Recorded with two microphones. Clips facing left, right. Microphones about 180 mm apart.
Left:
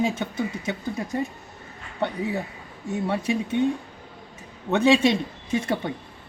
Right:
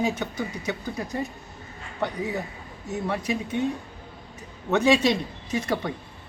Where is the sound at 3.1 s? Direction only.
30° left (ahead or behind).